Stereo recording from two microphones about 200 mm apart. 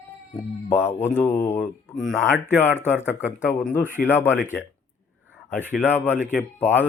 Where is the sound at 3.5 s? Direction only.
10° left (ahead or behind).